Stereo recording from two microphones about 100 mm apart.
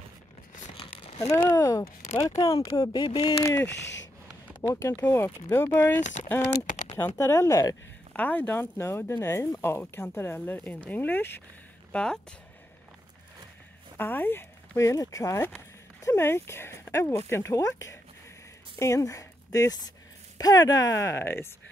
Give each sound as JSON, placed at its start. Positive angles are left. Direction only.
{"t": 0.7, "sound": "crumpling", "side_deg": 75}
{"t": 1.3, "sound": "speech", "side_deg": 35}
{"t": 2.8, "sound": "speech", "side_deg": 50}
{"t": 3.4, "sound": "speech", "side_deg": 25}
{"t": 4.7, "sound": "speech", "side_deg": 35}
{"t": 8.1, "sound": "speech", "side_deg": 15}
{"t": 11.9, "sound": "speech", "side_deg": 10}
{"t": 13.9, "sound": "speech", "side_deg": 20}